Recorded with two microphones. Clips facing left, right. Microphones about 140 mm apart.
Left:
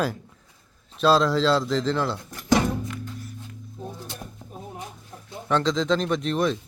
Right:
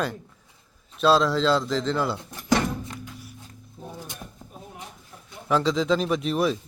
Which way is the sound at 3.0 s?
10° right (ahead or behind).